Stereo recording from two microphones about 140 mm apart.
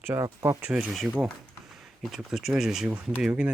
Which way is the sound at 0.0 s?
20° right (ahead or behind).